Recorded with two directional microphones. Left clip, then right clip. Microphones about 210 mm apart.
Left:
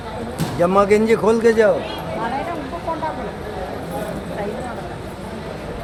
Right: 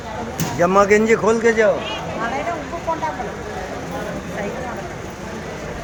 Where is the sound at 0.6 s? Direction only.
5° right (ahead or behind).